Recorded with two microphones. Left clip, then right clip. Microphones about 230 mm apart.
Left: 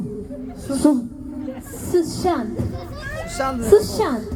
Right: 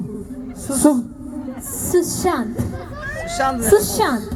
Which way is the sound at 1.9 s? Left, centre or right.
Right.